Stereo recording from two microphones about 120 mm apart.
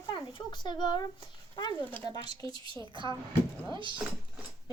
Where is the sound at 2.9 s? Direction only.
40° right (ahead or behind).